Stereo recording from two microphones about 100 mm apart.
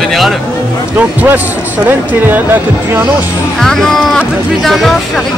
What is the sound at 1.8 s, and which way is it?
Speech, 20° right (ahead or behind).